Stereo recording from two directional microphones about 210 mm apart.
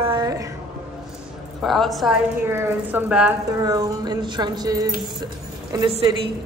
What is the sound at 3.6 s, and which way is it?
A woman's voice, 15° right (ahead or behind).